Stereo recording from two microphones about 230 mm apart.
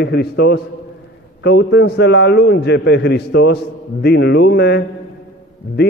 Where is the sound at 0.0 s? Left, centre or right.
Left.